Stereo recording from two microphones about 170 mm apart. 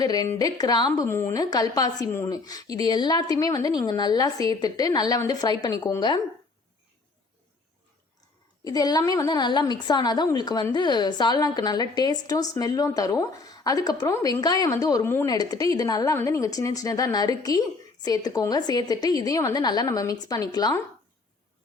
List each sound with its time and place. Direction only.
0.0 s a woman's voice: 25° left (ahead or behind)
8.6 s a woman's voice: 20° left (ahead or behind)